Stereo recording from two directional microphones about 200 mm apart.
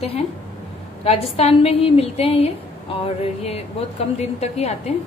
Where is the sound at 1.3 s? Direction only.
30° left (ahead or behind).